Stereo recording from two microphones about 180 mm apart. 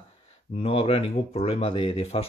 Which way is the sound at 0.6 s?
35° left (ahead or behind).